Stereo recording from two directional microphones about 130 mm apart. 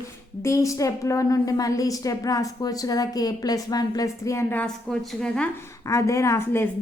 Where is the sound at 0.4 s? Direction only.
25° left (ahead or behind).